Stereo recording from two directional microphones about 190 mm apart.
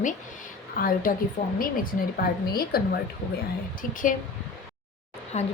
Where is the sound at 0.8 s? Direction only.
45° left (ahead or behind).